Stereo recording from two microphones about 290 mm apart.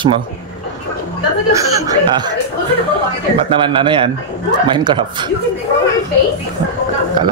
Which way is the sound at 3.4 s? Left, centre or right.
Centre.